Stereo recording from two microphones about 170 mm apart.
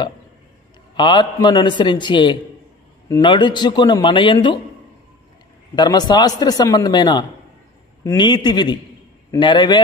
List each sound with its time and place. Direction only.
0.9 s a man's voice: 25° left (ahead or behind)
5.8 s a man's voice: 25° left (ahead or behind)